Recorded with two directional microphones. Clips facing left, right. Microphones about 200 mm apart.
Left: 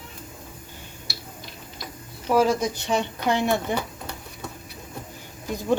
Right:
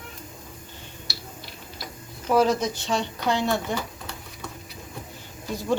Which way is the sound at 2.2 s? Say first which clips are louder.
Even; 10° left (ahead or behind).